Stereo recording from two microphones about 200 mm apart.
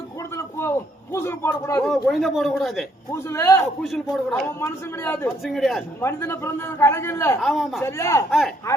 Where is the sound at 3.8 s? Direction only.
Centre (ahead or behind).